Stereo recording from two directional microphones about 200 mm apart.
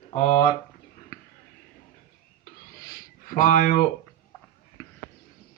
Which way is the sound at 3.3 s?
40° left (ahead or behind).